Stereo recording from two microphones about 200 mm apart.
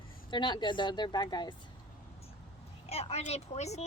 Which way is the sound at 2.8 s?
30° left (ahead or behind).